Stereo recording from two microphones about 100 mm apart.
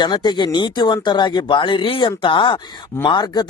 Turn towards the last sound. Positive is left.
turn(degrees=45)  # may be behind; listen again after turning